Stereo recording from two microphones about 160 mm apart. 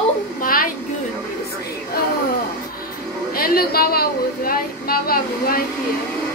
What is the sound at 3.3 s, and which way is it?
A woman's voice, 65° left (ahead or behind).